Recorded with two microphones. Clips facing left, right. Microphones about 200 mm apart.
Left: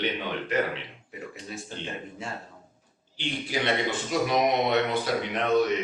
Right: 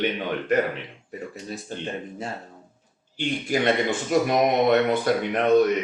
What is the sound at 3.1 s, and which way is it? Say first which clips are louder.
Speech: right 6 dB; 50° right (ahead or behind).